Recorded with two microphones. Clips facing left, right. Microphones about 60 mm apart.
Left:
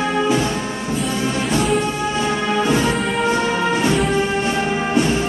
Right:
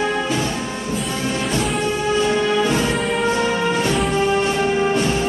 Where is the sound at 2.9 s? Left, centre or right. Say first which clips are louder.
Left 1 dB; centre.